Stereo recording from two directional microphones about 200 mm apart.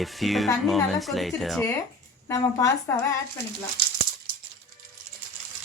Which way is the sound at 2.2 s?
15° left (ahead or behind).